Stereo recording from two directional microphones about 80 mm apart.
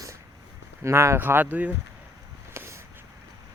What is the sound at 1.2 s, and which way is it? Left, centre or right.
Speech, right.